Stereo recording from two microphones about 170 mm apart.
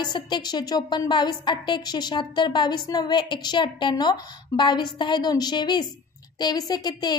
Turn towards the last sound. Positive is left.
turn(degrees=25)  # may be behind; listen again after turning